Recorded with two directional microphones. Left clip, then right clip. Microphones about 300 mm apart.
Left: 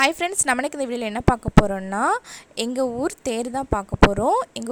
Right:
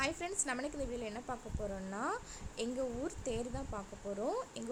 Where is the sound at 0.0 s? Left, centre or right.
Left.